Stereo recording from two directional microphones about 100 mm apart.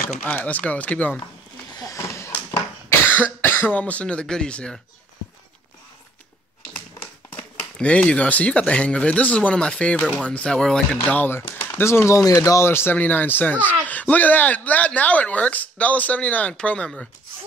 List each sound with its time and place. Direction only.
0.2 s speech: 15° left (ahead or behind)
1.8 s a sound: 30° left (ahead or behind)
2.9 s speech: 20° left (ahead or behind)
7.2 s speech: 15° left (ahead or behind)
11.1 s speech: 20° left (ahead or behind)